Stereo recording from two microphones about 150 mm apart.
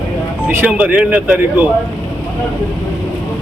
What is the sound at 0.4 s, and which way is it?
Speech, 10° right (ahead or behind).